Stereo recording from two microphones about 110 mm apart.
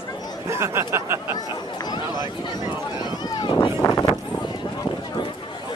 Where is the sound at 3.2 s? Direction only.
45° left (ahead or behind).